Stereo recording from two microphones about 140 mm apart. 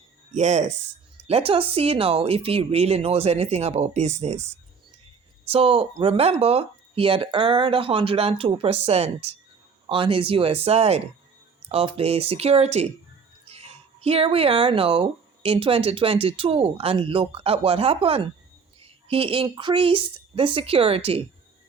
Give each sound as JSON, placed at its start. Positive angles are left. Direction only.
{"t": 0.3, "sound": "speech", "side_deg": -55}
{"t": 1.3, "sound": "speech", "side_deg": -45}
{"t": 5.5, "sound": "speech", "side_deg": -45}
{"t": 13.4, "sound": "a sound", "side_deg": -45}
{"t": 15.4, "sound": "a woman's voice", "side_deg": -40}